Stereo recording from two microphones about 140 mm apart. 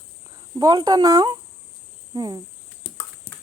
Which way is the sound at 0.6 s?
30° right (ahead or behind).